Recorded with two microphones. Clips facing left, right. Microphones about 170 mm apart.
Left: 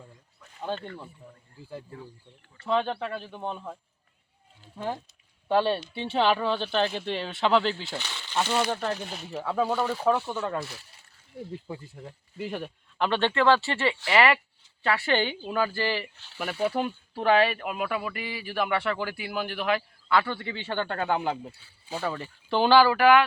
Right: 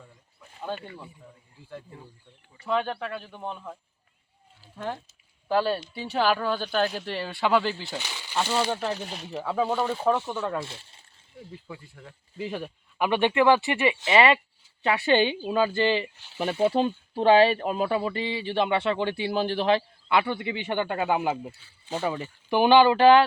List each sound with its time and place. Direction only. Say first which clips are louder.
0.6 s speech: left 1 dB; 10° right (ahead or behind)
2.6 s speech: left 1 dB; centre (ahead or behind)
5.5 s speech: left 1 dB; centre (ahead or behind)
5.9 s speech: left 2 dB; 25° left (ahead or behind)
6.1 s speech: even; 5° right (ahead or behind)
10.7 s speech: right 1 dB; 25° right (ahead or behind)
11.7 s speech: left 4 dB; 20° left (ahead or behind)
12.4 s speech: right 1 dB; centre (ahead or behind)
13.1 s speech: right 2 dB; 15° right (ahead or behind)